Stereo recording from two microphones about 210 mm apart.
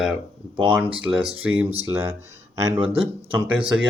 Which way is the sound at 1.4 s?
10° right (ahead or behind).